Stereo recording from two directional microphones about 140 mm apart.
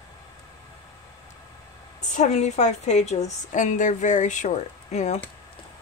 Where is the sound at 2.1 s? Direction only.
55° left (ahead or behind).